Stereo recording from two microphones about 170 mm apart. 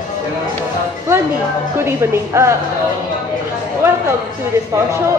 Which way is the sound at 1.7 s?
15° right (ahead or behind).